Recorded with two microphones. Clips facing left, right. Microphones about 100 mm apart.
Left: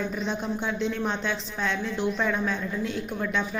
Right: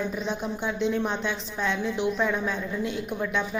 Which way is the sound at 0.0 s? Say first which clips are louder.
Even; 10° right (ahead or behind).